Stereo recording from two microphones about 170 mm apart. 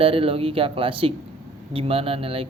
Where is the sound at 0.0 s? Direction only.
35° right (ahead or behind).